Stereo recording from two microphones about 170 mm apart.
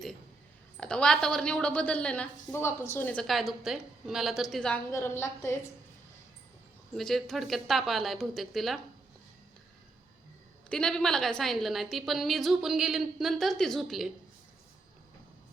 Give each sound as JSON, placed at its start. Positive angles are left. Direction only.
{"t": 0.8, "sound": "a woman's voice", "side_deg": 5}
{"t": 4.9, "sound": "a woman's voice", "side_deg": 15}
{"t": 6.9, "sound": "a woman's voice", "side_deg": 0}
{"t": 10.7, "sound": "a woman's voice", "side_deg": 5}